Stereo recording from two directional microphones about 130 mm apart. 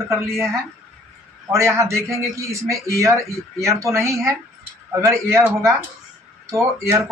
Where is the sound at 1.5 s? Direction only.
20° right (ahead or behind).